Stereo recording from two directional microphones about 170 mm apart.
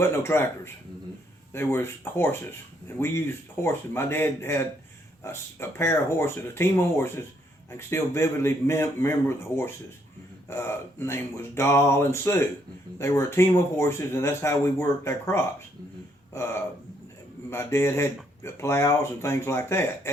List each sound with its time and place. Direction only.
0.0 s speech: 15° left (ahead or behind)